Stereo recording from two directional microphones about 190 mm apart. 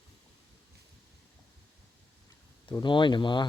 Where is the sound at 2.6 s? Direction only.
25° left (ahead or behind).